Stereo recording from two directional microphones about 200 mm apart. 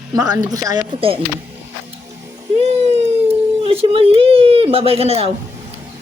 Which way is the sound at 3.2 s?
30° right (ahead or behind).